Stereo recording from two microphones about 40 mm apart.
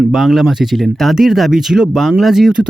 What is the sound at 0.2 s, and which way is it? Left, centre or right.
Speech, centre.